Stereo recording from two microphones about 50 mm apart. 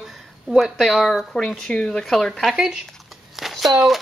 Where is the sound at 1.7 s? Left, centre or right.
Centre.